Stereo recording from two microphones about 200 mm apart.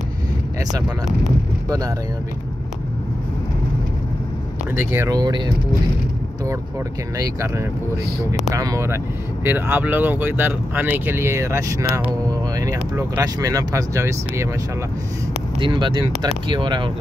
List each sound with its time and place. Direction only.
0.8 s speech: centre (ahead or behind)
4.7 s speech: 15° right (ahead or behind)
7.2 s speech: 15° right (ahead or behind)
15.6 s speech: 25° right (ahead or behind)